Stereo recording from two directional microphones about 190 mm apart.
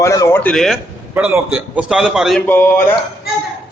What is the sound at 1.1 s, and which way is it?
A man's voice, 10° right (ahead or behind).